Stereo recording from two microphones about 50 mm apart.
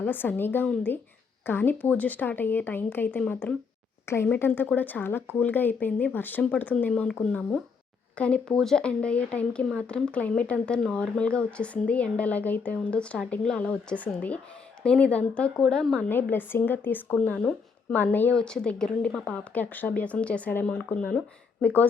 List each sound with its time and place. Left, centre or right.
0.1 s speech: left
4.0 s speech: left
4.4 s a woman's voice: left
8.4 s a woman's voice: centre
8.9 s speech: left
15.7 s a woman's voice: centre
16.0 s a woman's voice: left
18.3 s a woman's voice: centre
19.5 s speech: left